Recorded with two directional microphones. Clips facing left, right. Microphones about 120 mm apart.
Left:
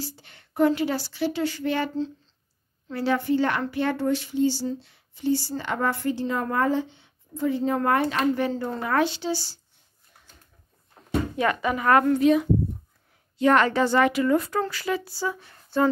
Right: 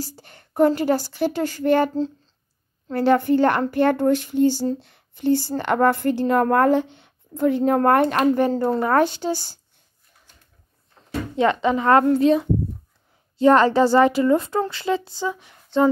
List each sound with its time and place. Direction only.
0.0 s a woman's voice: 45° right (ahead or behind)
8.2 s a woman's voice: 40° right (ahead or behind)
11.3 s a woman's voice: 25° right (ahead or behind)